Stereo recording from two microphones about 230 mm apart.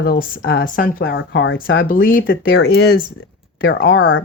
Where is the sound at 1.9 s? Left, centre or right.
Left.